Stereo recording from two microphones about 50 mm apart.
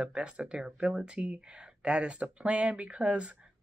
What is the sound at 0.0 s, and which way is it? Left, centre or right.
Speech, right.